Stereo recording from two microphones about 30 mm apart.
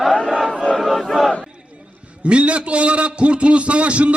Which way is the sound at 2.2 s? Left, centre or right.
Right.